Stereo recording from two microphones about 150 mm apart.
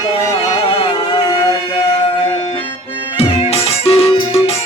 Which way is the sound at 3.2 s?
40° left (ahead or behind).